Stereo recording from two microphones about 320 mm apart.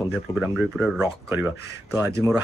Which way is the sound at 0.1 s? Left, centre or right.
Centre.